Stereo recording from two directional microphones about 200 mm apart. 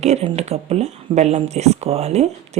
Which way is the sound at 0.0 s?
30° right (ahead or behind).